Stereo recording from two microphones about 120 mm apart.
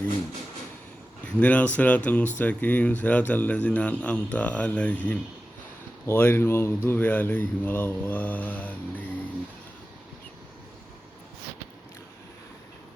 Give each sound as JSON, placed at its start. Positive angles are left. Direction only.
{"t": 1.2, "sound": "a man's voice", "side_deg": 10}